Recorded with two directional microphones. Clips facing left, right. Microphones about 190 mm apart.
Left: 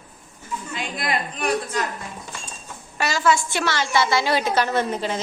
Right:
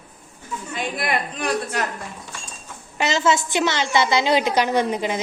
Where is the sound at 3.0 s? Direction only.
20° right (ahead or behind).